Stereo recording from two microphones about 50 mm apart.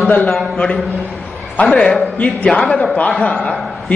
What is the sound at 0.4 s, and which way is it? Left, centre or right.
A man's voice, left.